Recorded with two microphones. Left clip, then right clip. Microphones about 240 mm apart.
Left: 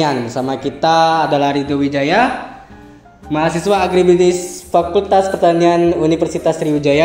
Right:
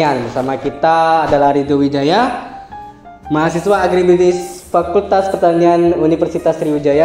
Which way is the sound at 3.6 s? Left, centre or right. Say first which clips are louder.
Even; left.